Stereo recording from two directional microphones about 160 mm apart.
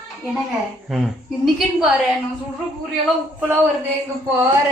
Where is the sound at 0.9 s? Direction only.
Centre (ahead or behind).